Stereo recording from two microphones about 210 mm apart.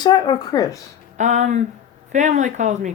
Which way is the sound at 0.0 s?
20° left (ahead or behind).